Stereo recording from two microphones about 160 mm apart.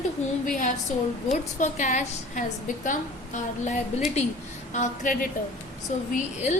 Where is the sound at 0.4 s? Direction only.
55° left (ahead or behind).